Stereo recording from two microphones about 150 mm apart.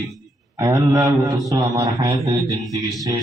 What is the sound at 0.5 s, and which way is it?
A man's voice, 25° right (ahead or behind).